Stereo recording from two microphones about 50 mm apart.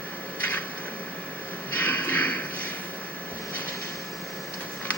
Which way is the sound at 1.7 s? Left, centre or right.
Left.